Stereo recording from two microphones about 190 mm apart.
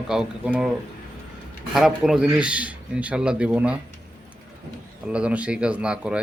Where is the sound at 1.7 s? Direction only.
Centre (ahead or behind).